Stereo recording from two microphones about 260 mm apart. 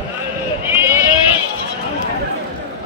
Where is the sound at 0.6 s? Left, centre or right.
Centre.